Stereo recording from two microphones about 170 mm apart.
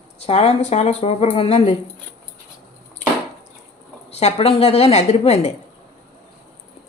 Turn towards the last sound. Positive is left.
turn(degrees=40)  # may be behind; listen again after turning